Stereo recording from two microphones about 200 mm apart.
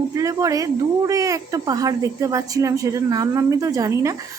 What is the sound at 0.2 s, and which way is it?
Speech, 15° right (ahead or behind).